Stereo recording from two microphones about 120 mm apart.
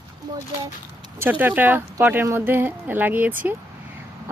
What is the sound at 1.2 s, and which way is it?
Speech, 15° right (ahead or behind).